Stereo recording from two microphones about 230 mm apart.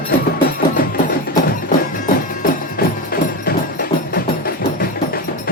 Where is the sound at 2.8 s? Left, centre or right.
Left.